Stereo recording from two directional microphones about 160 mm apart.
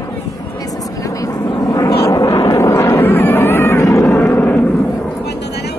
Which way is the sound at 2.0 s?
20° left (ahead or behind).